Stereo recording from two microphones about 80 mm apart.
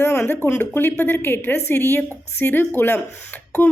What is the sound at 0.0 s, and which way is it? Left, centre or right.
A woman's voice, left.